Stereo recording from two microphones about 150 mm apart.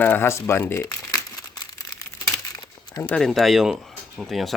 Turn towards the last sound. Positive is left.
turn(degrees=0)  # may be behind; listen again after turning